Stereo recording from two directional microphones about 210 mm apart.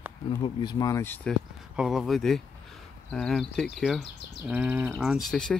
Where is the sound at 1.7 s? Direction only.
Centre (ahead or behind).